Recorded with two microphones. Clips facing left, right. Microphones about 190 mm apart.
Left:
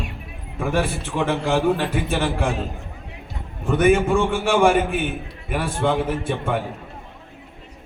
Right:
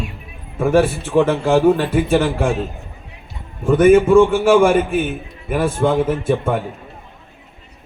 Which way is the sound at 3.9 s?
40° right (ahead or behind).